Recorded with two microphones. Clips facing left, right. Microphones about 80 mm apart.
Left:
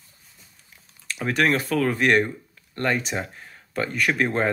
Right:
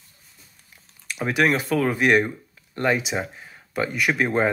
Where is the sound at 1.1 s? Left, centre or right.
Centre.